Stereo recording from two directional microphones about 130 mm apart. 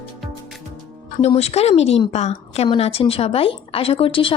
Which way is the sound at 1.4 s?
55° left (ahead or behind).